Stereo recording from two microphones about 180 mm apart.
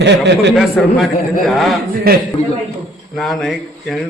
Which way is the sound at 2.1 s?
55° right (ahead or behind).